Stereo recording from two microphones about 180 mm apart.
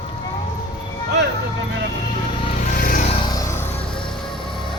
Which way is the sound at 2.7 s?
50° left (ahead or behind).